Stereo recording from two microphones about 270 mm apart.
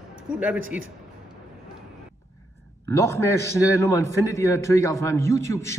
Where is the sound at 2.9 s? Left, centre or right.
Centre.